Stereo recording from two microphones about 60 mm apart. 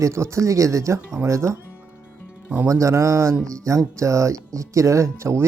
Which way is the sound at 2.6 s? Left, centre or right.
Right.